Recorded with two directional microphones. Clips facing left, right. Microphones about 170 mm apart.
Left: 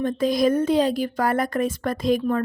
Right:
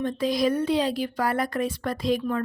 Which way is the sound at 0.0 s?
45° left (ahead or behind).